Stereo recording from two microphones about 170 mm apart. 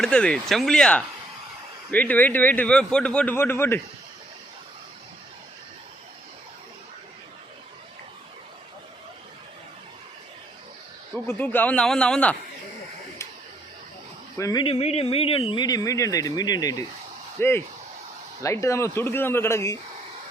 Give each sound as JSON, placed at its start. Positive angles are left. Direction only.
{"t": 0.0, "sound": "a man's voice", "side_deg": 5}
{"t": 11.3, "sound": "a man's voice", "side_deg": 10}
{"t": 14.3, "sound": "speech", "side_deg": 20}
{"t": 14.6, "sound": "a sound", "side_deg": 35}
{"t": 15.1, "sound": "a man's voice", "side_deg": 35}